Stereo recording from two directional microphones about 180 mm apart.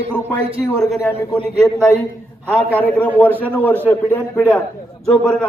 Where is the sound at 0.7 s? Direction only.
Centre (ahead or behind).